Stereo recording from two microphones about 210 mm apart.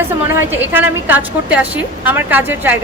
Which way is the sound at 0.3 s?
10° right (ahead or behind).